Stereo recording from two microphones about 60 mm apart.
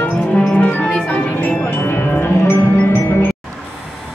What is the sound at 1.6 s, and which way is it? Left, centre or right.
Music, left.